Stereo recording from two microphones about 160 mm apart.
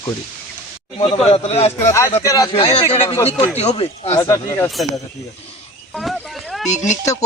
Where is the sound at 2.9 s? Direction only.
40° left (ahead or behind).